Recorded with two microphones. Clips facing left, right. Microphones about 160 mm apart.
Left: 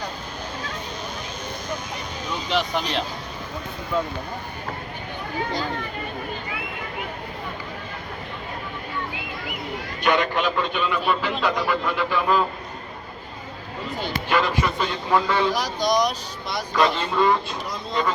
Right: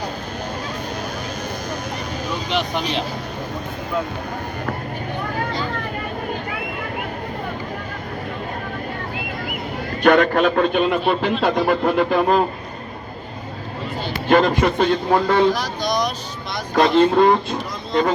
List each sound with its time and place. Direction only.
2.6 s speech: centre (ahead or behind)
10.0 s a man's voice: 55° right (ahead or behind)
14.3 s a man's voice: 50° right (ahead or behind)
15.5 s speech: 15° left (ahead or behind)
16.7 s a man's voice: 45° right (ahead or behind)